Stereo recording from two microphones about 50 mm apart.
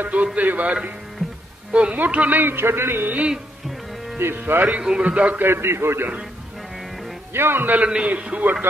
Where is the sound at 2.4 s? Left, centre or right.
Right.